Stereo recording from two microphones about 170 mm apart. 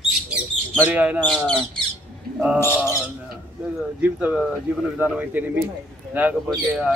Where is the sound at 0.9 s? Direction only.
10° right (ahead or behind).